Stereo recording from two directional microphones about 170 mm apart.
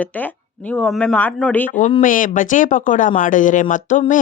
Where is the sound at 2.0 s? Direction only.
50° left (ahead or behind).